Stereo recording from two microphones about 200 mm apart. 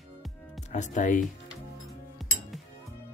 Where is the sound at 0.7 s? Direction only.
35° left (ahead or behind).